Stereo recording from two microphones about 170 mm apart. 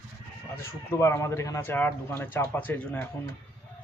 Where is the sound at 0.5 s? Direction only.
15° left (ahead or behind).